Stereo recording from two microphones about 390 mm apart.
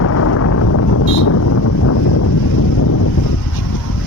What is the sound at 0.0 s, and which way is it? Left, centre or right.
Wind noise, left.